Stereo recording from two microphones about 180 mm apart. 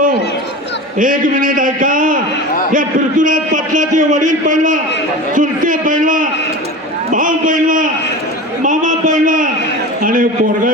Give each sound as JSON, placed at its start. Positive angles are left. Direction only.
{"t": 0.9, "sound": "a man's voice", "side_deg": -50}
{"t": 8.6, "sound": "a sound", "side_deg": -45}
{"t": 10.0, "sound": "a man's voice", "side_deg": -50}